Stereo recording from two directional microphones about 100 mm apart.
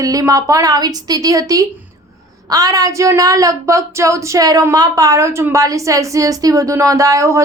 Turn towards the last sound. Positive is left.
turn(degrees=-30)  # may be behind; listen again after turning